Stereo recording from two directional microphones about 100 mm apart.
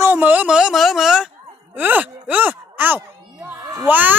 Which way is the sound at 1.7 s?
15° right (ahead or behind).